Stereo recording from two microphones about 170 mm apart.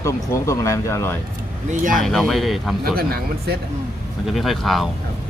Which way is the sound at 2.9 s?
60° right (ahead or behind).